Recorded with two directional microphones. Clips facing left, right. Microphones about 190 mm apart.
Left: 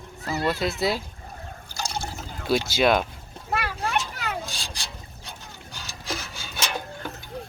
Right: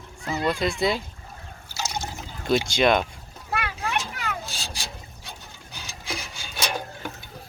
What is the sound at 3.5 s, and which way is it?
Children playing, 40° left (ahead or behind).